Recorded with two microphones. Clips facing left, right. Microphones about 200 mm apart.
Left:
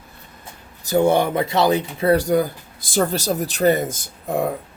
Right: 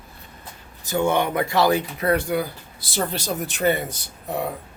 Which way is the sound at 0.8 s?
40° left (ahead or behind).